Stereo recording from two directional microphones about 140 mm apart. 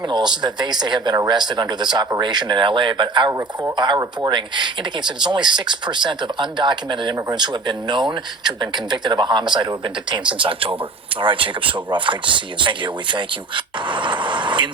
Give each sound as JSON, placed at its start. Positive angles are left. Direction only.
{"t": 0.1, "sound": "speech", "side_deg": -30}